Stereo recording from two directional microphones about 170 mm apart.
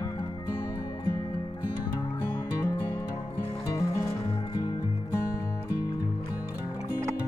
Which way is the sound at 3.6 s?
20° left (ahead or behind).